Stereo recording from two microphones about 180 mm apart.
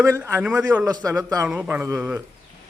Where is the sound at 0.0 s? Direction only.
15° right (ahead or behind).